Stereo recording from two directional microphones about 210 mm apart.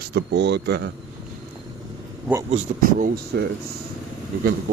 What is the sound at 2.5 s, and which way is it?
Speech, 35° right (ahead or behind).